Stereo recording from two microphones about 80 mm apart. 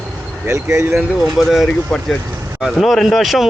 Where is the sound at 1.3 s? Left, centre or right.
Centre.